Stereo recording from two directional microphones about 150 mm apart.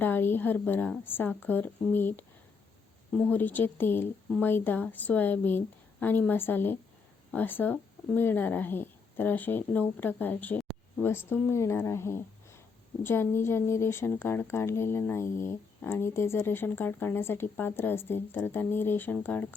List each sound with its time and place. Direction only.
0.0 s speech: 15° left (ahead or behind)